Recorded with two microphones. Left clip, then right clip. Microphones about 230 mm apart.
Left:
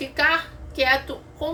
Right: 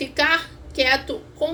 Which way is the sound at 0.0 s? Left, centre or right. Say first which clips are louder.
Right 1 dB; centre.